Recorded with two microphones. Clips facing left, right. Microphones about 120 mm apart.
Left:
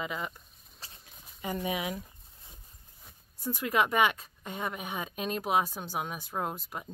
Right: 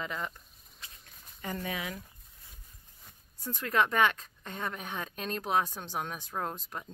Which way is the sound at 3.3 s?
10° left (ahead or behind).